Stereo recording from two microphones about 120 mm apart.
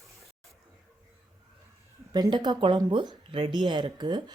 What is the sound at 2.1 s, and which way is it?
Speech, 40° right (ahead or behind).